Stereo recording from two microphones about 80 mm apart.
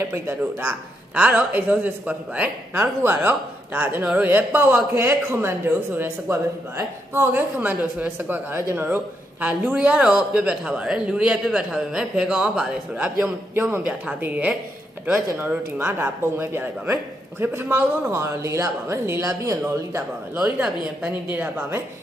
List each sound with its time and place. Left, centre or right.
0.0 s a woman's voice: right
1.1 s a woman's voice: centre
4.9 s a woman's voice: right
7.2 s a woman's voice: right
8.8 s a man's voice: right; by 12.7 s centre
13.2 s a woman's voice: right
15.8 s a woman's voice: right
19.2 s speech: right
20.3 s speech: centre
21.5 s a woman's voice: right